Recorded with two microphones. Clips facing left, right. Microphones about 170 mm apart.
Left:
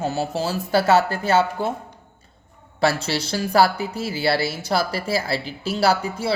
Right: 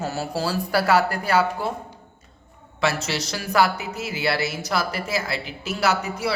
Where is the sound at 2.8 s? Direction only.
30° left (ahead or behind).